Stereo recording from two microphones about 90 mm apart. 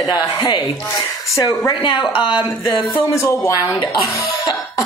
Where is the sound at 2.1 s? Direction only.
70° left (ahead or behind).